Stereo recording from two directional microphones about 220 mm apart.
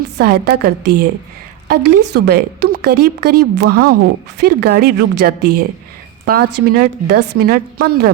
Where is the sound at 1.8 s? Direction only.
90° right.